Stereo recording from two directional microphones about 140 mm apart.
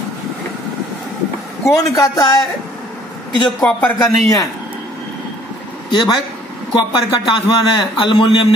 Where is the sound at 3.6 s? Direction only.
15° left (ahead or behind).